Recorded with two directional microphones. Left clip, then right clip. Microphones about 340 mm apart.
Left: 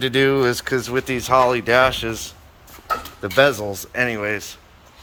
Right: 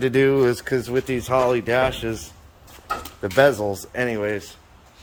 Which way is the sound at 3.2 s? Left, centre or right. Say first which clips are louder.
Even; centre.